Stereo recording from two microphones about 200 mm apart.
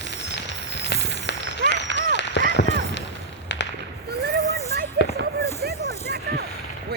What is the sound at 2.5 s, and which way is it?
Run, 60° left (ahead or behind).